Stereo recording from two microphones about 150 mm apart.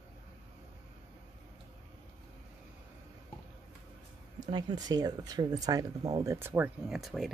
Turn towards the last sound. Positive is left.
turn(degrees=0)  # may be behind; listen again after turning